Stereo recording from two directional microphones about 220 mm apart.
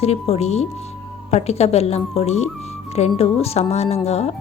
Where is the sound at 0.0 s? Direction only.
30° left (ahead or behind).